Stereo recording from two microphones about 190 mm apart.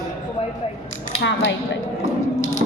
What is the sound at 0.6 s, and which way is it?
Speech, 30° left (ahead or behind).